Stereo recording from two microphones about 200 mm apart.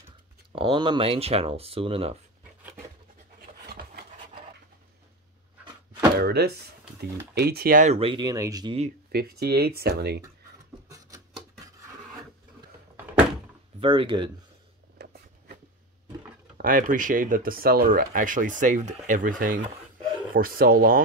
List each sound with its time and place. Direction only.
0.6 s speech: 25° right (ahead or behind)
3.6 s rub: 50° right (ahead or behind)
6.1 s speech: 55° right (ahead or behind); by 8.7 s 20° right (ahead or behind)
9.1 s speech: 50° right (ahead or behind)
13.7 s speech: 25° right (ahead or behind)
15.0 s a sound: 50° right (ahead or behind)
16.5 s speech: 45° right (ahead or behind)